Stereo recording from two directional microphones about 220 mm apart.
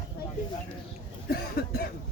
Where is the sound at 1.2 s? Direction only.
45° left (ahead or behind).